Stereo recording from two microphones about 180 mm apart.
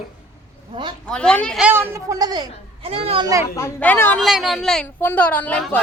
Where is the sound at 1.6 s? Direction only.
15° right (ahead or behind); by 3.3 s 30° right (ahead or behind).